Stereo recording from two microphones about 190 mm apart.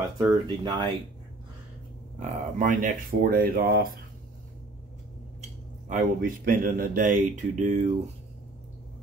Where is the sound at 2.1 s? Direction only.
45° right (ahead or behind).